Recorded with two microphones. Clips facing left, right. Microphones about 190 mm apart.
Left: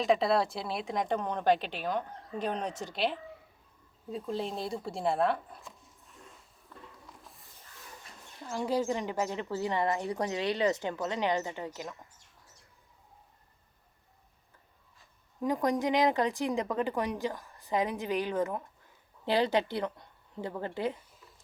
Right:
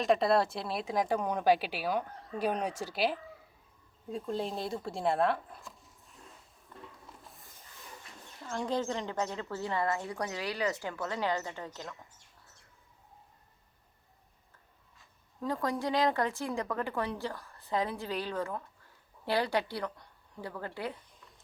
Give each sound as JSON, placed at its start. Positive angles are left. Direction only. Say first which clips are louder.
{"t": 0.0, "sound": "speech", "louder": "even", "side_deg": 0}
{"t": 8.4, "sound": "speech", "louder": "left 3 dB", "side_deg": 5}
{"t": 15.4, "sound": "speech", "louder": "left 4 dB", "side_deg": 15}